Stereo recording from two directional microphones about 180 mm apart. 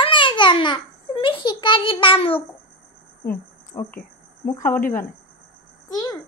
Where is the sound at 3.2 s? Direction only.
55° left (ahead or behind).